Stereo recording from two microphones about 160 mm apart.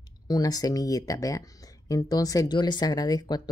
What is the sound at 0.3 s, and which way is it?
Speech, 25° left (ahead or behind).